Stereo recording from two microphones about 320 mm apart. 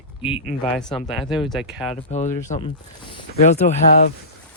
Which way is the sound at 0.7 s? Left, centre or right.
Centre.